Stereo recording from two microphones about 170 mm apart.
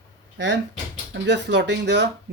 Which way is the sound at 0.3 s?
90° right.